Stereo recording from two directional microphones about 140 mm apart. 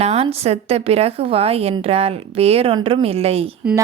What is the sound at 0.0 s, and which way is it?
A woman's voice, 50° right (ahead or behind).